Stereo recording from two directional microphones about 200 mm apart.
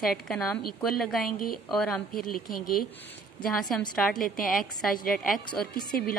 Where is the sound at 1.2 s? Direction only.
45° left (ahead or behind).